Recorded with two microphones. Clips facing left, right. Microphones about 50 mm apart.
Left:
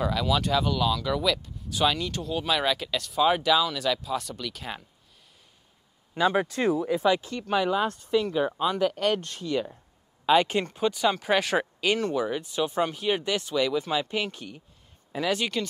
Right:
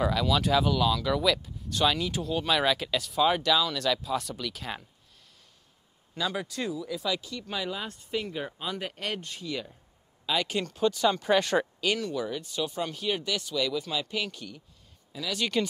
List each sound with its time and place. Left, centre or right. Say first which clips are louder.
0.0 s speech: even; centre
6.1 s speech: left 8 dB; left
8.1 s speech: left 6 dB; left
8.6 s speech: left 10 dB; left
10.2 s speech: left 7 dB; left; by 11.1 s centre
11.1 s speech: left 1 dB; centre
11.9 s speech: left 5 dB; left
12.2 s speech: left 4 dB; left
15.1 s speech: left 8 dB; left
15.5 s speech: right 2 dB; centre